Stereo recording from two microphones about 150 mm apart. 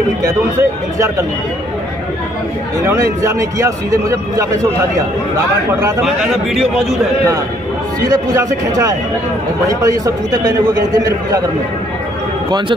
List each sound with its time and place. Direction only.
0.2 s a man's voice: 20° right (ahead or behind)
2.9 s a man's voice: 20° right (ahead or behind)
6.0 s a man's voice: centre (ahead or behind)
8.0 s a man's voice: 25° right (ahead or behind)
12.4 s speech: 30° right (ahead or behind)